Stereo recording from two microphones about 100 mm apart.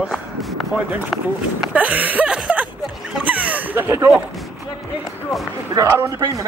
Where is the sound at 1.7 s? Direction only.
15° right (ahead or behind).